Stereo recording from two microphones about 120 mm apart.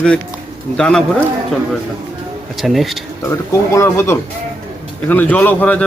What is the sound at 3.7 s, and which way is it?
Speech, 20° left (ahead or behind).